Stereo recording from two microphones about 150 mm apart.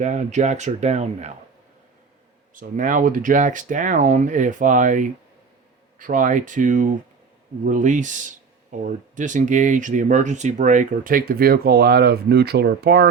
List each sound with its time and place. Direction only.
0.0 s speech: 55° right (ahead or behind)
2.6 s speech: 60° right (ahead or behind); by 13.1 s 90° right